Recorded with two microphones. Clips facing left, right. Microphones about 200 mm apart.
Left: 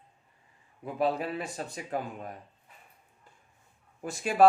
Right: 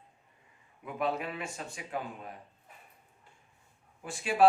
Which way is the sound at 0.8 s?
35° left (ahead or behind).